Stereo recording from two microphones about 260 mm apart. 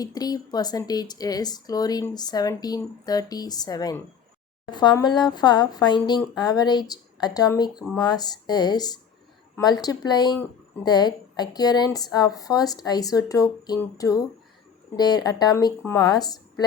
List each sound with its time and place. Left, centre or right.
0.0 s speech: centre